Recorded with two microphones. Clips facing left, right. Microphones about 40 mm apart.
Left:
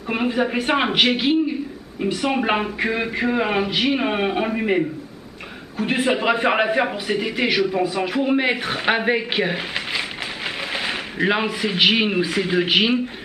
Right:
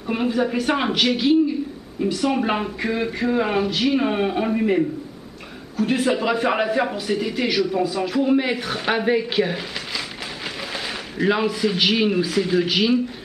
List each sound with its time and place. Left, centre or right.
0.1 s a man's voice: left